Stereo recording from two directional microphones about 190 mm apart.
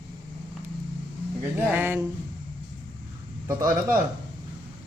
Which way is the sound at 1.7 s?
10° right (ahead or behind).